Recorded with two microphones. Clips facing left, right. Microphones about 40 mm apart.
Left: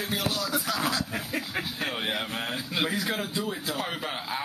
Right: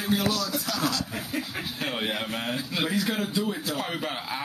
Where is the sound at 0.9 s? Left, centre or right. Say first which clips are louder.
Even; left.